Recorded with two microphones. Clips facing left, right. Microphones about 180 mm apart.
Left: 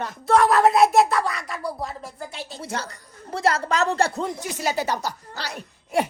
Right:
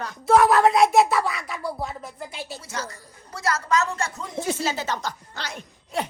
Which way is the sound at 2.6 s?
60° left (ahead or behind).